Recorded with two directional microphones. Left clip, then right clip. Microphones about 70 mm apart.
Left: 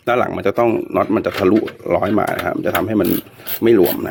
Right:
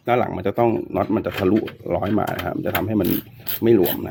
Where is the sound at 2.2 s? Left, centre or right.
Centre.